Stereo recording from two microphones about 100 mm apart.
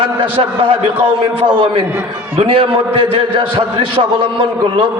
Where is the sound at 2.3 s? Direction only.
75° right (ahead or behind).